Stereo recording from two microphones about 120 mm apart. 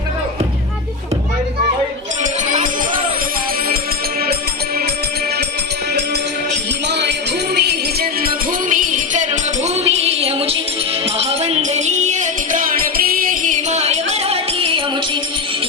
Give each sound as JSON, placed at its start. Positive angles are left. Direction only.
{"t": 8.7, "sound": "music", "side_deg": -90}